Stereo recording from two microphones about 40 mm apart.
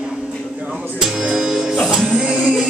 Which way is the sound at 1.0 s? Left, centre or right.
Centre.